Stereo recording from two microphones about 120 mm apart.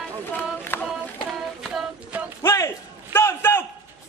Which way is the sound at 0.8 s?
Centre (ahead or behind).